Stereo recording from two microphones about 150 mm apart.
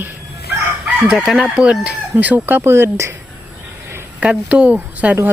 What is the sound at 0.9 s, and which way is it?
Chicken, 5° right (ahead or behind).